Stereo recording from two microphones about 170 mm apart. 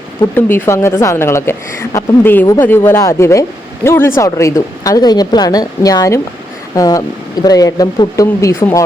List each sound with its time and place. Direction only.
0.2 s a woman's voice: 15° left (ahead or behind)